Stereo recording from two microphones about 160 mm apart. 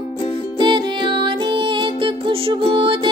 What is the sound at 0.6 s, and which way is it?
Music, 30° right (ahead or behind).